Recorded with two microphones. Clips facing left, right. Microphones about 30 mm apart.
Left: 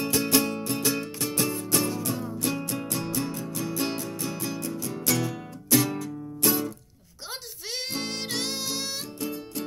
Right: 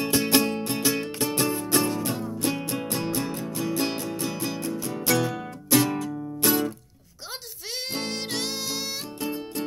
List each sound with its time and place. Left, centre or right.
0.1 s music: right
1.9 s music: centre
8.0 s harmonica: centre
9.2 s music: right